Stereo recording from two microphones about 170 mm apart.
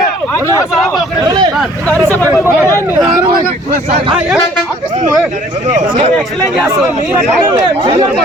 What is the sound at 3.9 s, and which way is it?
Speech, 40° right (ahead or behind).